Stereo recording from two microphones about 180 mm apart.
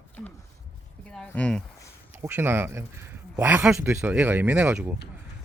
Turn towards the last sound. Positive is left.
turn(degrees=-5)  # may be behind; listen again after turning